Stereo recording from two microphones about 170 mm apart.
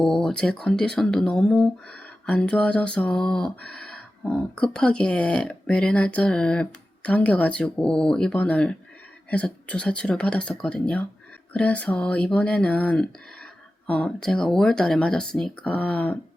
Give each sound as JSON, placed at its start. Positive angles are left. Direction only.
{"t": 0.0, "sound": "speech", "side_deg": 5}